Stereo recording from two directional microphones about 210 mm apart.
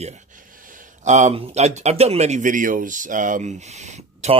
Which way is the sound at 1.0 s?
35° right (ahead or behind).